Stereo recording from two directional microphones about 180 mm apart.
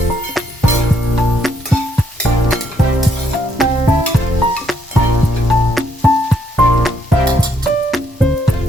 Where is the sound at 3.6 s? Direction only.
Centre (ahead or behind).